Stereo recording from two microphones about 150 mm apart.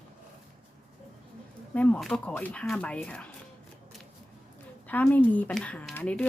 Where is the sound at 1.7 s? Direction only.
10° left (ahead or behind).